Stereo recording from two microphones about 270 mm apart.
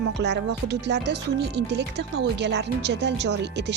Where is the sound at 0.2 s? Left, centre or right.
Right.